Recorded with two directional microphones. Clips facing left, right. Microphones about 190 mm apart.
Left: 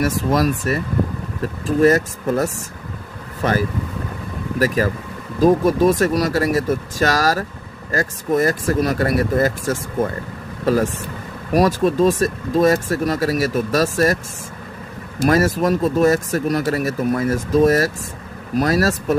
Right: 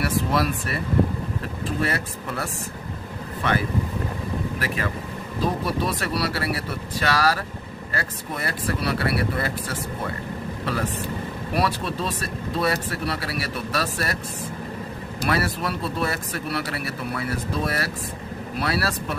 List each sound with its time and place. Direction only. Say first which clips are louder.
0.0 s speech: left 5 dB; 45° left (ahead or behind)
1.8 s speech: left 15 dB; 45° left (ahead or behind)
15.1 s speech: left 9 dB; 45° left (ahead or behind)